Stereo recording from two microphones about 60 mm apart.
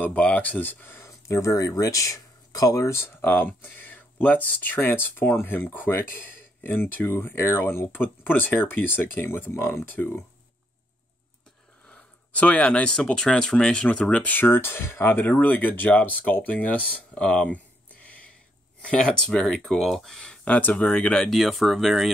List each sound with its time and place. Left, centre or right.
0.0 s speech: left
1.2 s speech: left
2.9 s speech: left
9.8 s speech: left
11.8 s speech: left
13.8 s speech: left
18.0 s a sound: left
18.9 s speech: centre
19.4 s speech: centre
20.4 s speech: left
21.3 s speech: centre